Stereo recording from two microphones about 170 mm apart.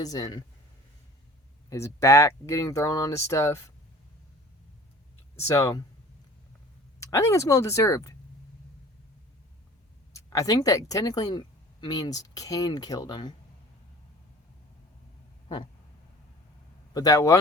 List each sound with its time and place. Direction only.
0.0 s speech: 20° left (ahead or behind)
1.7 s speech: 15° left (ahead or behind)
5.5 s speech: 20° left (ahead or behind)
7.0 s speech: 15° left (ahead or behind)
10.1 s speech: 20° left (ahead or behind)
16.9 s speech: 20° left (ahead or behind)